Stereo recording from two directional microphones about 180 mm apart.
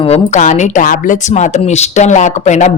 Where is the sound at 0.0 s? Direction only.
35° left (ahead or behind).